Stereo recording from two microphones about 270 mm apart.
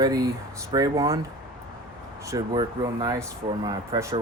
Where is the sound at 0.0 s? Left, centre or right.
Centre.